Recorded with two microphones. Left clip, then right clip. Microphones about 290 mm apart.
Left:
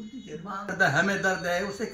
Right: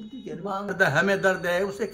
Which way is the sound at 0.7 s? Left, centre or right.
Centre.